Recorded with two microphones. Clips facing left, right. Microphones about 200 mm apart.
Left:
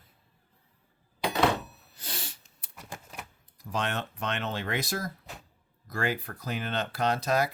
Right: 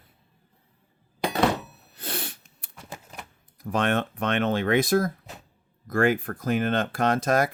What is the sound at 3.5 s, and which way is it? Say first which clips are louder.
Speech: right 8 dB; 55° right (ahead or behind).